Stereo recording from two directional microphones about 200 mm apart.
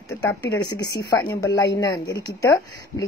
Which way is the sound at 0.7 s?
20° left (ahead or behind).